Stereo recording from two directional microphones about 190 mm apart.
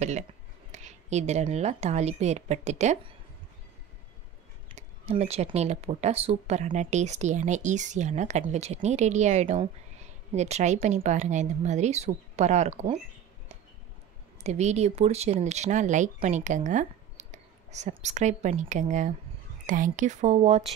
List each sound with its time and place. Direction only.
0.7 s a woman's voice: 35° right (ahead or behind)
4.7 s speech: 35° right (ahead or behind)
14.4 s speech: 35° right (ahead or behind)